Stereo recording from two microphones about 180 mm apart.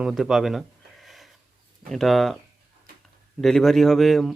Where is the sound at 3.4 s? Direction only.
Centre (ahead or behind).